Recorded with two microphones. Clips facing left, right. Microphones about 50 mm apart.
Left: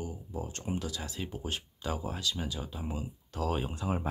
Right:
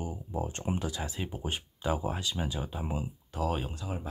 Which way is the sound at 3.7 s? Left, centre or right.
Left.